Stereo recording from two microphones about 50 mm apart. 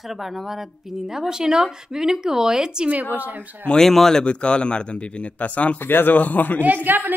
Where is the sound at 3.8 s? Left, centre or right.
Centre; by 5.7 s left.